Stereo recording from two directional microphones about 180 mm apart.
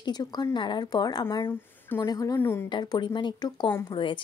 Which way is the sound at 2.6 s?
25° left (ahead or behind).